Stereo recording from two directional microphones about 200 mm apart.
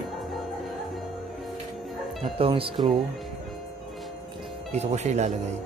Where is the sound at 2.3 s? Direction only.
25° right (ahead or behind).